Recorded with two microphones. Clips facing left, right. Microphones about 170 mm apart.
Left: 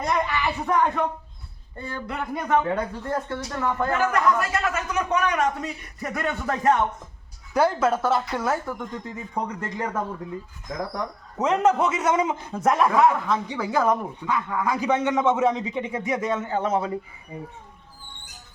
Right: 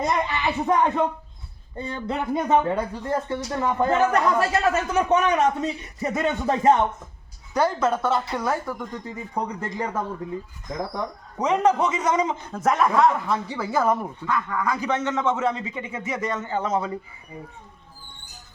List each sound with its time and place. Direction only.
0.0 s speech: 20° right (ahead or behind)
2.6 s a man's voice: centre (ahead or behind)
3.1 s speech: 15° right (ahead or behind)
7.5 s a man's voice: 5° left (ahead or behind)
9.3 s speech: 10° right (ahead or behind)
10.7 s a man's voice: centre (ahead or behind)
13.2 s a man's voice: 5° right (ahead or behind)
14.3 s a man's voice: 10° left (ahead or behind)
16.0 s a man's voice: centre (ahead or behind)